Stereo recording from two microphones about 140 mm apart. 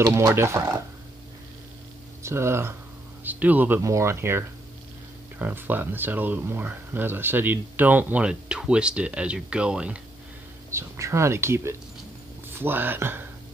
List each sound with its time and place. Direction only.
0.0 s speech: 20° right (ahead or behind)
2.2 s speech: 20° right (ahead or behind)
10.7 s speech: 20° right (ahead or behind)